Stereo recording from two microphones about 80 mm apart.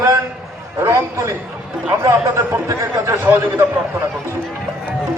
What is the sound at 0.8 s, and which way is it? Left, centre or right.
Speech, right.